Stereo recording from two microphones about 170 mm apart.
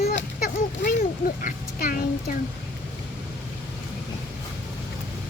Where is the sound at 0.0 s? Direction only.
65° left (ahead or behind).